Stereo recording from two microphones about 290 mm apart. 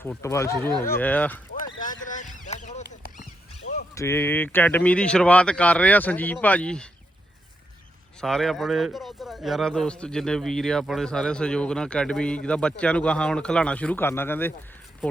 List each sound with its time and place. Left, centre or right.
0.0 s speech: centre
2.0 s a sound: left
3.9 s speech: centre
8.2 s speech: centre